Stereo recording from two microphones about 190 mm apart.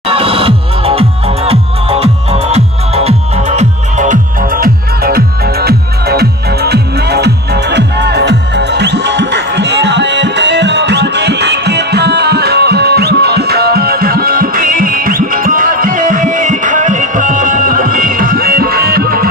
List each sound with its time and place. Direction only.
0.1 s music: 30° right (ahead or behind); by 19.2 s 50° right (ahead or behind)